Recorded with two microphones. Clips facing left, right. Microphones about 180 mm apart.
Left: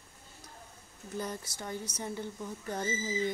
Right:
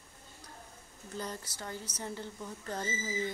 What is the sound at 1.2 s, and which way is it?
Speech, 15° left (ahead or behind).